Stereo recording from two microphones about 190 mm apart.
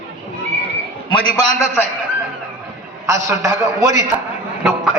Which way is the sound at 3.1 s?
15° right (ahead or behind).